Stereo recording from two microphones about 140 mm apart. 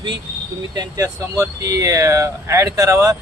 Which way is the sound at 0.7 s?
25° right (ahead or behind).